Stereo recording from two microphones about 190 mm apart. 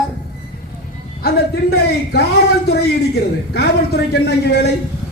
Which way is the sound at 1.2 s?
60° left (ahead or behind).